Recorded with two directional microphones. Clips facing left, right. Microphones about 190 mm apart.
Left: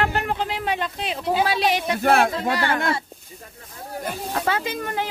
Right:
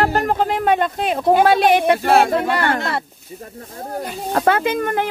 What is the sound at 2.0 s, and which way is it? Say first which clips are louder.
Speech: right 3 dB; 55° left (ahead or behind).